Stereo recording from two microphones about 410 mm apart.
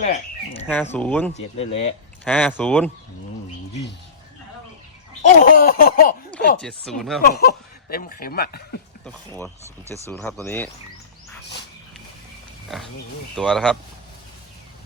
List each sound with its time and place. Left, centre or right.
0.5 s speech: centre
1.3 s speech: centre
2.2 s speech: centre
5.2 s speech: centre
6.6 s speech: centre
7.2 s speech: left
9.0 s speech: centre
13.3 s speech: centre